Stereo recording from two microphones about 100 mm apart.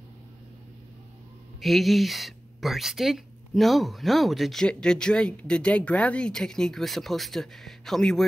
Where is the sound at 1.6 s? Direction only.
Centre (ahead or behind).